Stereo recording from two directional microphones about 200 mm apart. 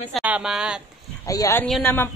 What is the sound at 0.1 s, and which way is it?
Speech, 5° right (ahead or behind).